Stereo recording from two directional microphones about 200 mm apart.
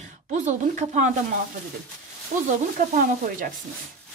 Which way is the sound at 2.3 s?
45° right (ahead or behind).